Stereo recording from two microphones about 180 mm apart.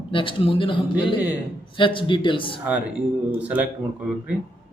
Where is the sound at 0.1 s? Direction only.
30° left (ahead or behind).